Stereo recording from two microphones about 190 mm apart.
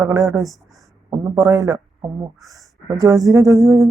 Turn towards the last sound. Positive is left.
turn(degrees=-15)  # may be behind; listen again after turning